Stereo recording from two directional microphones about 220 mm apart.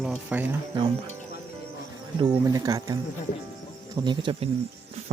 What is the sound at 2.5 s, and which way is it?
Speech, 15° right (ahead or behind).